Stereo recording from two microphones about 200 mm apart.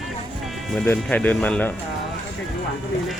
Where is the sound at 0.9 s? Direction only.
10° left (ahead or behind).